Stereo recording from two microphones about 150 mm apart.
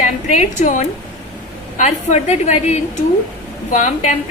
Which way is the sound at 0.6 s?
55° left (ahead or behind).